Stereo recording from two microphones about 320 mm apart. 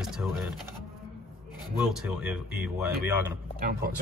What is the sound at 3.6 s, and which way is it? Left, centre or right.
Speech, right.